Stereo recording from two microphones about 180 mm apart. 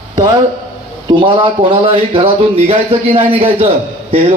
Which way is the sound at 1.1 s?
30° right (ahead or behind).